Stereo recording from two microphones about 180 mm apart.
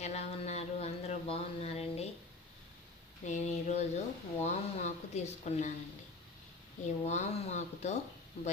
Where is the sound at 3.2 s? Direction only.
40° left (ahead or behind).